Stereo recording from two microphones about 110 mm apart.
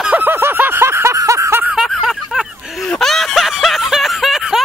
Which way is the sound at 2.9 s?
5° left (ahead or behind).